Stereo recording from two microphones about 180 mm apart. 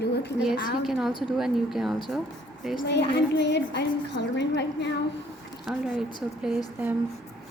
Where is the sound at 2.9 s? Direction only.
70° left (ahead or behind).